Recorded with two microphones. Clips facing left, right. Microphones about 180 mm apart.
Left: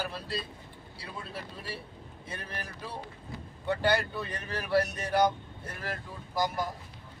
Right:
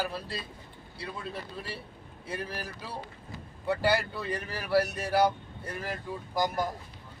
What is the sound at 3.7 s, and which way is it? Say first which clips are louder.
Speech: right 1 dB; 5° right (ahead or behind).